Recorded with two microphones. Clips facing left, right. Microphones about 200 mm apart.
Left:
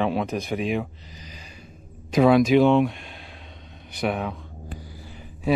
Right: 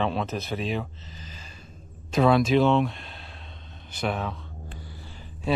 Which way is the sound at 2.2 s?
10° left (ahead or behind).